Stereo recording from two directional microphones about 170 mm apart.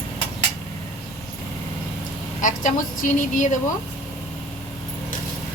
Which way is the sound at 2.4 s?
50° left (ahead or behind).